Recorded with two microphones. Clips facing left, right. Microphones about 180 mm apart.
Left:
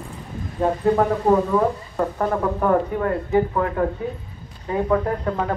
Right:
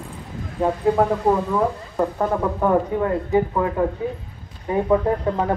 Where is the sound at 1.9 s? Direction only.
10° right (ahead or behind).